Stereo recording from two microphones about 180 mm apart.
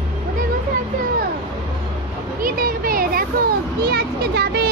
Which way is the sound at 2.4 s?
55° right (ahead or behind).